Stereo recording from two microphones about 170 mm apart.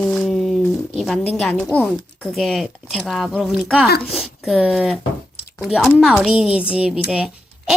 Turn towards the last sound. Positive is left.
turn(degrees=-5)  # may be behind; listen again after turning